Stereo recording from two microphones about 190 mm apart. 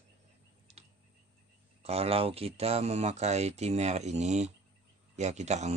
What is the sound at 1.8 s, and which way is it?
Speech, 30° right (ahead or behind).